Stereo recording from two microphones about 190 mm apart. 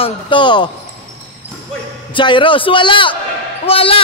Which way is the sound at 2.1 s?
25° left (ahead or behind).